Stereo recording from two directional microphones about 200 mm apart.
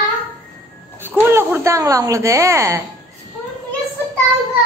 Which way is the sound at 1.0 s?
10° right (ahead or behind).